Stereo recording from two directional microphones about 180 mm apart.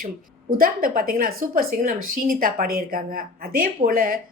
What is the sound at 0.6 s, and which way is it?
Speech, 50° right (ahead or behind).